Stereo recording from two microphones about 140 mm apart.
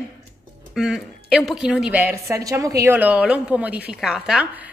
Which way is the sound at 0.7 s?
5° right (ahead or behind).